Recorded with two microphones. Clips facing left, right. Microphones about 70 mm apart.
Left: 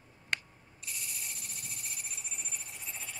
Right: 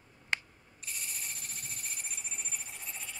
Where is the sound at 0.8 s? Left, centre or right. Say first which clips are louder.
Right 1 dB; right.